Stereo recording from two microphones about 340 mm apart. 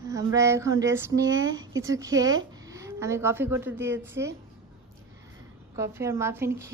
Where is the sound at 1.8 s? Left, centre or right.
Centre.